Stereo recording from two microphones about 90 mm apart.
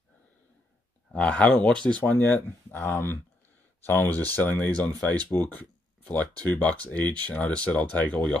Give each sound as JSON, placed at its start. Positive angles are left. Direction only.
{"t": 1.1, "sound": "speech", "side_deg": 10}